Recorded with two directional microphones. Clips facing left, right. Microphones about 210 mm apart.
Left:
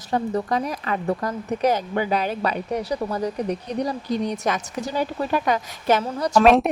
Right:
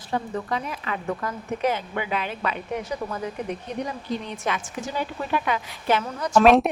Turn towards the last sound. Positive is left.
turn(degrees=0)  # may be behind; listen again after turning